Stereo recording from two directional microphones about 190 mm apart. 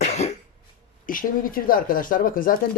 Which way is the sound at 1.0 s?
45° left (ahead or behind).